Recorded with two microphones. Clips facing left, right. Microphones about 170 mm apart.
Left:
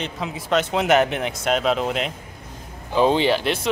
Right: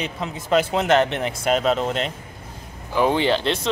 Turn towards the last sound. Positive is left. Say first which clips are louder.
# even
turn(degrees=10)  # may be behind; listen again after turning